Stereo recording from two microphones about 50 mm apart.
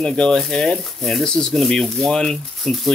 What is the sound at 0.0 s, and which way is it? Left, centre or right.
Speech, centre.